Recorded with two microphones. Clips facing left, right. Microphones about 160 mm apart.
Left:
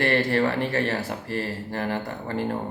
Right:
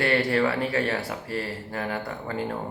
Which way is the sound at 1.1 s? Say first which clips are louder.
Left 2 dB; 45° left (ahead or behind).